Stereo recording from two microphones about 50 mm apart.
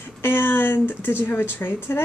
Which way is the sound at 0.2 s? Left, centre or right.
Left.